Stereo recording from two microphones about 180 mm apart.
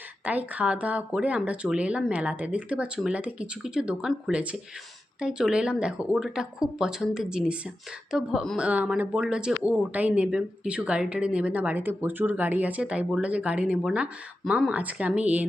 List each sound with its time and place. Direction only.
0.3 s speech: 10° right (ahead or behind)